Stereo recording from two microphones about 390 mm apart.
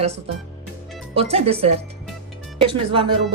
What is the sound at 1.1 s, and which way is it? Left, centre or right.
Speech, centre.